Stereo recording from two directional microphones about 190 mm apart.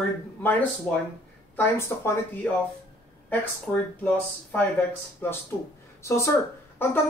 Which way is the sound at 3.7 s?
5° left (ahead or behind).